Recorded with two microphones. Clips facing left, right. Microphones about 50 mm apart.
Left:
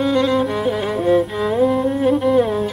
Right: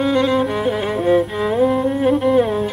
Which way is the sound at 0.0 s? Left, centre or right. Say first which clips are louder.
Even; centre.